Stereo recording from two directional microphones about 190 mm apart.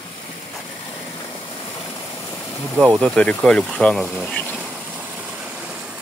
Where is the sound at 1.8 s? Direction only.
25° left (ahead or behind).